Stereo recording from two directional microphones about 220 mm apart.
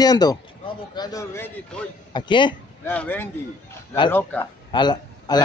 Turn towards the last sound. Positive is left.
turn(degrees=20)  # may be behind; listen again after turning